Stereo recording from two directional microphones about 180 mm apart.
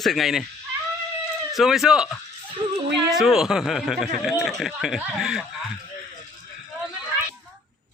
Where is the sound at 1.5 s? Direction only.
Centre (ahead or behind).